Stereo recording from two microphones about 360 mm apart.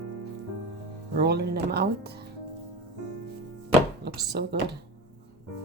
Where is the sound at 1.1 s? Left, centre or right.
Right.